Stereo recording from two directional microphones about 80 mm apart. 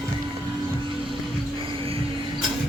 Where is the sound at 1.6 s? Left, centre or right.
Right.